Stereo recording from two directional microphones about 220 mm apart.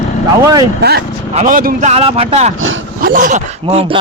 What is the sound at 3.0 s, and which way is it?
Speech, 40° right (ahead or behind).